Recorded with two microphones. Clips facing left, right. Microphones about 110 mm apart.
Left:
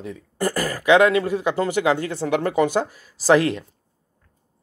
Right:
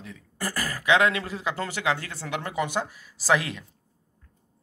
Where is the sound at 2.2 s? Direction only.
40° left (ahead or behind).